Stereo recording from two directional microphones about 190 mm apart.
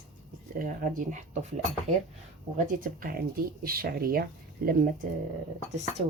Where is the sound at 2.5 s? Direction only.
50° right (ahead or behind).